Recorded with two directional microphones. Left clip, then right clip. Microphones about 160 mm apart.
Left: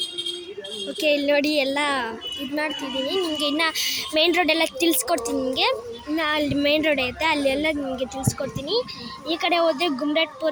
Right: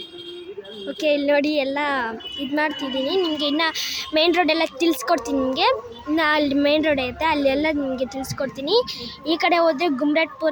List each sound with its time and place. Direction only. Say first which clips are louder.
1.0 s a woman's voice: right 1 dB; 5° right (ahead or behind)
2.6 s a woman's voice: right 4 dB; 20° right (ahead or behind)